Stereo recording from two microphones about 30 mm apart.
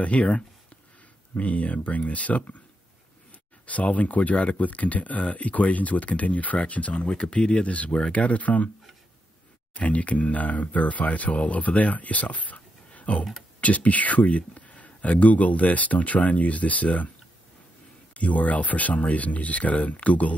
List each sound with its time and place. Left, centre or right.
0.0 s speech: left
3.6 s speech: left
6.6 s speech: left
7.1 s speech: left
7.5 s speech: left
9.8 s speech: left
18.1 s speech: left